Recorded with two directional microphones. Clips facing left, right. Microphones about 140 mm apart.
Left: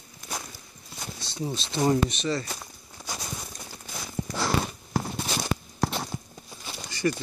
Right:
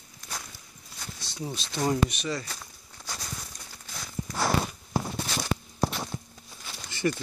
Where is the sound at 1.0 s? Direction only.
20° left (ahead or behind).